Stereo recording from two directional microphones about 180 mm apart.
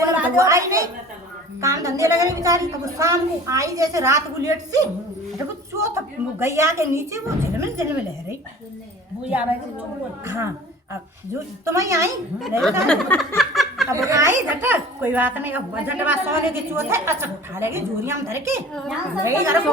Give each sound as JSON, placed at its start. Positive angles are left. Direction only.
{"t": 0.2, "sound": "a sound", "side_deg": -15}
{"t": 1.6, "sound": "speech", "side_deg": -20}
{"t": 6.4, "sound": "speech", "side_deg": -15}
{"t": 11.7, "sound": "speech", "side_deg": -15}
{"t": 12.4, "sound": "a child's voice", "side_deg": 0}
{"t": 12.8, "sound": "a sound", "side_deg": 5}
{"t": 13.9, "sound": "speech", "side_deg": -15}
{"t": 18.7, "sound": "a child's voice", "side_deg": 0}
{"t": 19.2, "sound": "speech", "side_deg": -15}